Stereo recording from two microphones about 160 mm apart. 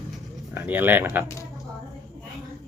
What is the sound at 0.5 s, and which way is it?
Speech, 10° right (ahead or behind).